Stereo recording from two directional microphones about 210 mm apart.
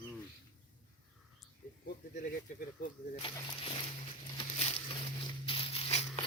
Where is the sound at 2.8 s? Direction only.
40° left (ahead or behind).